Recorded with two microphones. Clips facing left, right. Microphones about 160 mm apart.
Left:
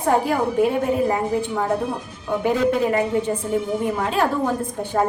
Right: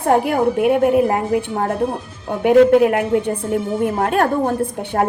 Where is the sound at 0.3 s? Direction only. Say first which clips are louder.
Right 4 dB; 65° right (ahead or behind).